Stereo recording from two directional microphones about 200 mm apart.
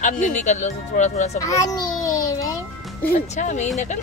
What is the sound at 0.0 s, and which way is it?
Speech, 35° left (ahead or behind).